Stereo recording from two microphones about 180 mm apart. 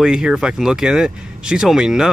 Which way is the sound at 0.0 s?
5° right (ahead or behind).